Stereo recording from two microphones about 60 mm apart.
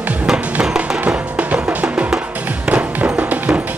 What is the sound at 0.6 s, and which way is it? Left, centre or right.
Music, centre.